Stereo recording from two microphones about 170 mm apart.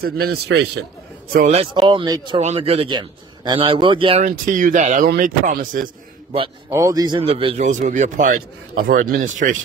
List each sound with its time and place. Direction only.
0.0 s a man's voice: 70° right (ahead or behind)
1.5 s speech: 30° right (ahead or behind)
2.4 s a man's voice: 35° right (ahead or behind)
4.2 s a man's voice: 50° right (ahead or behind)
6.7 s speech: 20° right (ahead or behind)
7.2 s a man's voice: 35° right (ahead or behind); by 9.6 s 50° right (ahead or behind)